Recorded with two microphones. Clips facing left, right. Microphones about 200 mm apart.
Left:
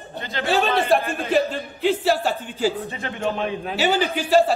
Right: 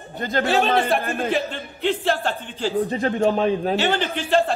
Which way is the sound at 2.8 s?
35° right (ahead or behind).